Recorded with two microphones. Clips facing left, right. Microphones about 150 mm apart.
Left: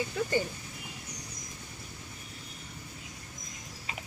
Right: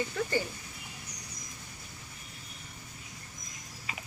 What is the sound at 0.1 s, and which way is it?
Speech, 15° left (ahead or behind).